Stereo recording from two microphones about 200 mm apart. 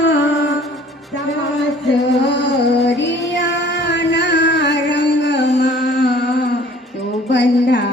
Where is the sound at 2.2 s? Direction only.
60° left (ahead or behind).